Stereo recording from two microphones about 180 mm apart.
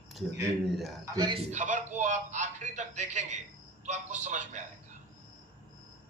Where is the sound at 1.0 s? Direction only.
20° right (ahead or behind).